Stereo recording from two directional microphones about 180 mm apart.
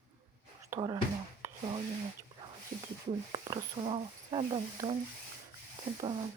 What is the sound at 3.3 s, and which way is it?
Speech, 20° right (ahead or behind).